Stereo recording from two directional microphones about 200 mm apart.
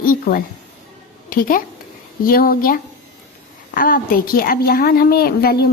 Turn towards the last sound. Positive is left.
turn(degrees=50)  # may be behind; listen again after turning